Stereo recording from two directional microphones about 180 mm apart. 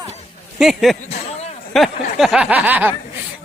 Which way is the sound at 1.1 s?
35° left (ahead or behind).